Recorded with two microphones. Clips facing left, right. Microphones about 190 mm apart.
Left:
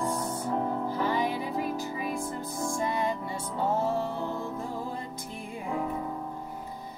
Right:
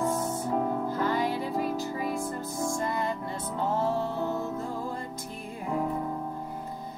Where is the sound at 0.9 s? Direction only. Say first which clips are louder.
Even; 15° left (ahead or behind).